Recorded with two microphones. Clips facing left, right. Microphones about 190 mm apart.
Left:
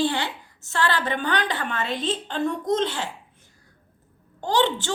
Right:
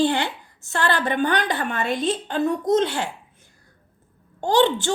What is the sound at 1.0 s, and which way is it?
Speech, 45° right (ahead or behind).